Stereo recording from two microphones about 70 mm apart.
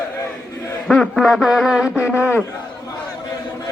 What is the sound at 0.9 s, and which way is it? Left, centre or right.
A man's voice, centre.